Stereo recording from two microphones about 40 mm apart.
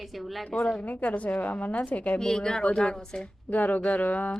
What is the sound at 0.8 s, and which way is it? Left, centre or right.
A woman's voice, left.